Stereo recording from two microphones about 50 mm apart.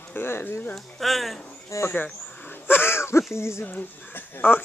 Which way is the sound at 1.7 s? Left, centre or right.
Left.